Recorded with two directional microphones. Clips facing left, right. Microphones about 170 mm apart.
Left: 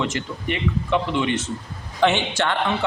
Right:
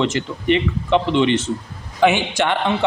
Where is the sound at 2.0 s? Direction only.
10° right (ahead or behind).